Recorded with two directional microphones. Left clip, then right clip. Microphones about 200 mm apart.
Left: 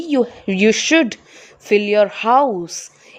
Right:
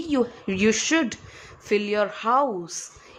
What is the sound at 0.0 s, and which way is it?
A woman's voice, 20° left (ahead or behind).